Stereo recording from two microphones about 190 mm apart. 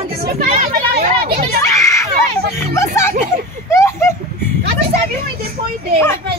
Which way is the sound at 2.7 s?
15° left (ahead or behind).